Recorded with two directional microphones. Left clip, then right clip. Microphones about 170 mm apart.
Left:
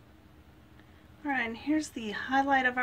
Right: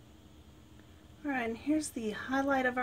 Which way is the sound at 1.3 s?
25° right (ahead or behind).